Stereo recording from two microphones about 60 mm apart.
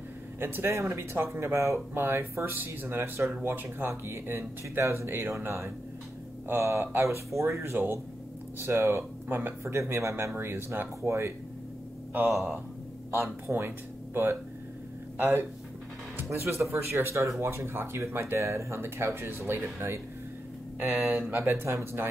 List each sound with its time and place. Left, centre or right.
0.4 s speech: right
3.9 s speech: right
7.2 s speech: right
7.6 s speech: right
10.3 s speech: right
13.5 s speech: right
20.8 s speech: right
21.4 s speech: right